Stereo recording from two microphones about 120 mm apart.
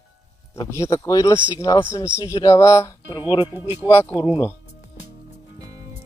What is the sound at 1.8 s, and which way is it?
Speech, 20° left (ahead or behind).